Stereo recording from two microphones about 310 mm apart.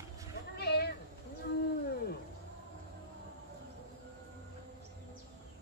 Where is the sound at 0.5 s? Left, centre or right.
Left.